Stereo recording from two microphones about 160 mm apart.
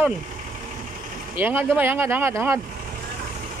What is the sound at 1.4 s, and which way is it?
Speech, 10° right (ahead or behind).